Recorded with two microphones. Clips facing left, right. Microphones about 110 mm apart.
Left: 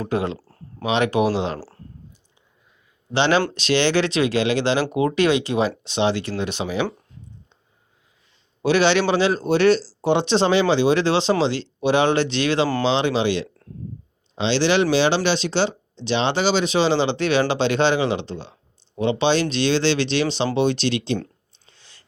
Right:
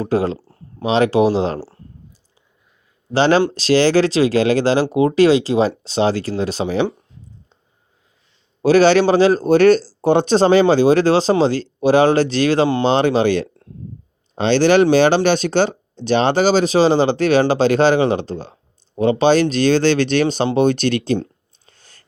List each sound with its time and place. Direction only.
0.0 s a man's voice: 35° right (ahead or behind)
0.3 s a sound: 20° right (ahead or behind)
0.8 s a man's voice: 35° right (ahead or behind)
1.5 s speech: 20° right (ahead or behind)
3.1 s a man's voice: 40° right (ahead or behind)
8.6 s a man's voice: 40° right (ahead or behind)
21.7 s chewing: 45° right (ahead or behind)